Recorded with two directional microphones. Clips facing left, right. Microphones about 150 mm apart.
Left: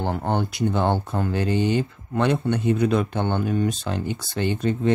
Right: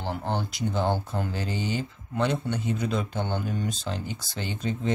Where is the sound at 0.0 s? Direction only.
55° left (ahead or behind).